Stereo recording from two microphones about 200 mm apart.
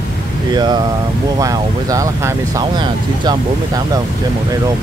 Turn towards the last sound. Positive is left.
turn(degrees=-20)  # may be behind; listen again after turning